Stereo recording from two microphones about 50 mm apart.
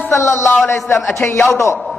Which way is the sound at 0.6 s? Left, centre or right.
Left.